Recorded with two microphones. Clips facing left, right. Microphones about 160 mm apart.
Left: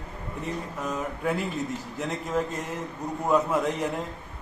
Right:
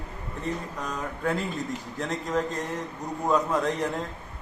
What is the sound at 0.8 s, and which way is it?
Speech, 5° left (ahead or behind).